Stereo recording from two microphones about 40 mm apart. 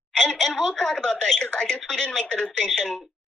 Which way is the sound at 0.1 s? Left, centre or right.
Centre.